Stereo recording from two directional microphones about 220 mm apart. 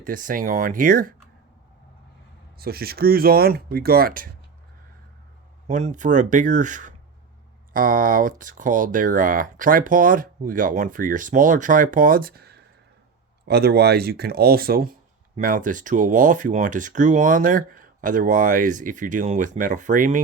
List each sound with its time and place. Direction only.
0.0 s speech: 40° right (ahead or behind)
2.6 s speech: 45° right (ahead or behind)
5.6 s speech: 35° right (ahead or behind)